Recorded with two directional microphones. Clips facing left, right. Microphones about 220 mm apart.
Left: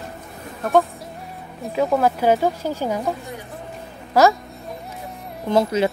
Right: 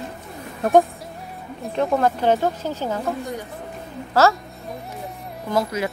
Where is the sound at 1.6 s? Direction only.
Centre (ahead or behind).